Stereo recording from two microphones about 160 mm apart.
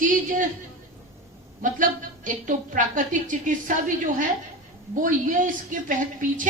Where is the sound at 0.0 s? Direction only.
55° right (ahead or behind).